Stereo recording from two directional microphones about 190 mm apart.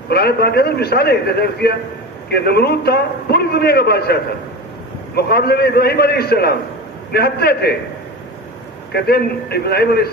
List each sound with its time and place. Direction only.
0.1 s a man's voice: 55° left (ahead or behind)
8.9 s a man's voice: 55° left (ahead or behind)